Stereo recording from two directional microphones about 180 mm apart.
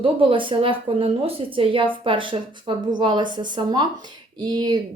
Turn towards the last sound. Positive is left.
turn(degrees=-25)  # may be behind; listen again after turning